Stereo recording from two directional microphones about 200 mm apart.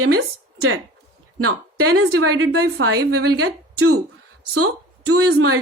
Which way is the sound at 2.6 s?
55° right (ahead or behind).